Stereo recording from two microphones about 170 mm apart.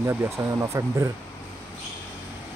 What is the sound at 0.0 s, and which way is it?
Speech, 15° right (ahead or behind).